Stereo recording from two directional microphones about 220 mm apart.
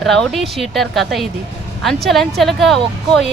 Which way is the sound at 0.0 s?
Centre (ahead or behind).